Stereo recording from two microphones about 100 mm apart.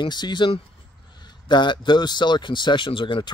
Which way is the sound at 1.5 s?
50° left (ahead or behind).